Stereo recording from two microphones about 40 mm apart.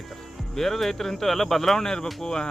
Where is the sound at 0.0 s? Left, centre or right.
Centre.